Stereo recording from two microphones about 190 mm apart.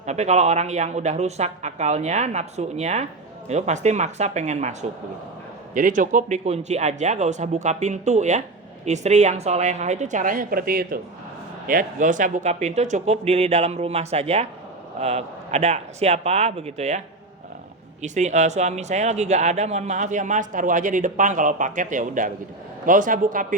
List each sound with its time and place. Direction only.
0.0 s speech: 35° right (ahead or behind)
18.0 s a man's voice: 40° right (ahead or behind)